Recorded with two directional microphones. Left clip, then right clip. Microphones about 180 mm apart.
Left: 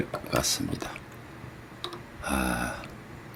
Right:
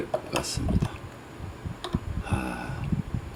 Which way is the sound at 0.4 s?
25° left (ahead or behind).